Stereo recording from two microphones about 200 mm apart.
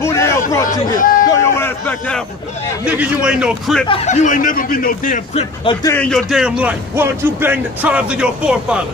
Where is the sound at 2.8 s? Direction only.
5° right (ahead or behind).